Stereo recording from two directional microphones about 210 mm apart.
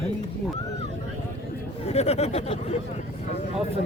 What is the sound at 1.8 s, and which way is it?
Speech, 30° left (ahead or behind).